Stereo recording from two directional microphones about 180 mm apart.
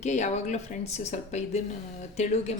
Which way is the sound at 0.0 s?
40° left (ahead or behind).